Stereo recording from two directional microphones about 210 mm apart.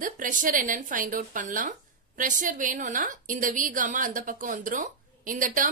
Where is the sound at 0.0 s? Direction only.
40° right (ahead or behind).